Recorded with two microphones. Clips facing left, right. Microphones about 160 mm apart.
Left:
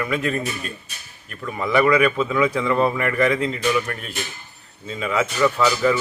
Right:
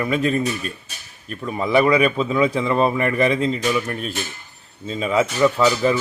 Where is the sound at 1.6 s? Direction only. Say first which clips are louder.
Right 1 dB; 25° right (ahead or behind).